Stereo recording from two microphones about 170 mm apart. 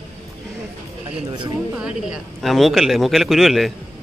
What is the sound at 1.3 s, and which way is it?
Speech, 25° right (ahead or behind).